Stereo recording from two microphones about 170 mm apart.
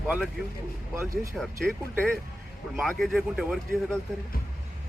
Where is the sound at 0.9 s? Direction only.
15° right (ahead or behind).